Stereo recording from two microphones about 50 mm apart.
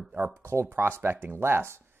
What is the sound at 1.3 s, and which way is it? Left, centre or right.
Speech, right.